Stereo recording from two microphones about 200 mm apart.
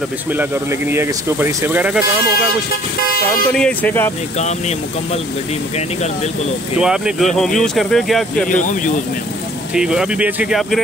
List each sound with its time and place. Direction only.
0.3 s speech: 10° right (ahead or behind)
3.0 s speech: 50° left (ahead or behind)
3.5 s speech: 5° left (ahead or behind)
4.4 s speech: 35° left (ahead or behind)
6.8 s speech: 5° right (ahead or behind)
8.5 s speech: 40° left (ahead or behind)
9.8 s speech: 5° right (ahead or behind)